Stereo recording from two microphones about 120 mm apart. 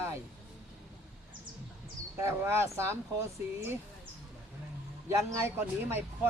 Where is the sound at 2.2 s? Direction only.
20° right (ahead or behind).